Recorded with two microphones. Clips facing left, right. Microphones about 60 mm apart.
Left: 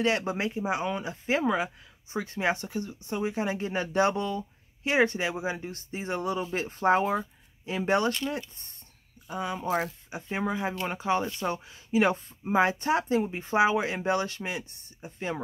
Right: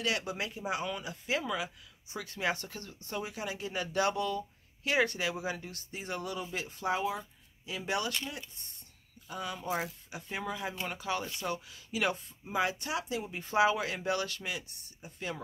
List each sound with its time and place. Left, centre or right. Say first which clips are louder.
0.0 s speech: left 7 dB; left